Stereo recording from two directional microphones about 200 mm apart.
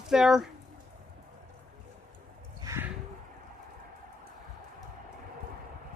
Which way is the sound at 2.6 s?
10° right (ahead or behind).